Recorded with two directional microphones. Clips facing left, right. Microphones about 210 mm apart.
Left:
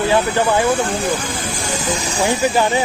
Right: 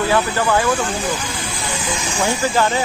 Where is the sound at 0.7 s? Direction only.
55° left (ahead or behind).